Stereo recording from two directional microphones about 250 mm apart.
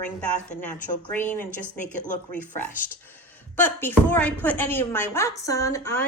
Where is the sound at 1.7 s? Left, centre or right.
Left.